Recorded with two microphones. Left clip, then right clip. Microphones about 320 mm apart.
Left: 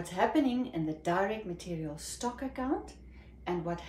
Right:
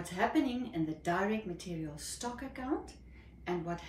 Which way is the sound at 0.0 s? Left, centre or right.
Centre.